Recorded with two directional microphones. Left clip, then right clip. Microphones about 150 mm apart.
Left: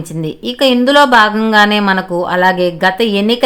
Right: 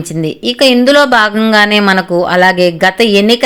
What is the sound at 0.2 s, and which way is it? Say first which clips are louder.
Speech: right 4 dB; 15° right (ahead or behind).